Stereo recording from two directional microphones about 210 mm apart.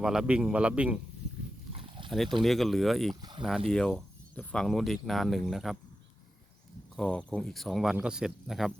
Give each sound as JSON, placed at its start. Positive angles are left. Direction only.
{"t": 0.0, "sound": "speech", "side_deg": -5}
{"t": 1.7, "sound": "dog", "side_deg": -25}
{"t": 2.0, "sound": "speech", "side_deg": 0}
{"t": 3.2, "sound": "speech", "side_deg": -20}
{"t": 3.7, "sound": "speech", "side_deg": 5}
{"t": 6.9, "sound": "speech", "side_deg": 5}